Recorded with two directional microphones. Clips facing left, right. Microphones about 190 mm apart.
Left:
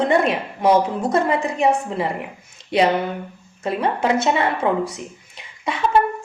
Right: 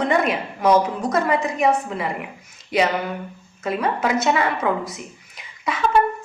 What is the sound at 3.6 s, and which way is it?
Speech, 30° left (ahead or behind).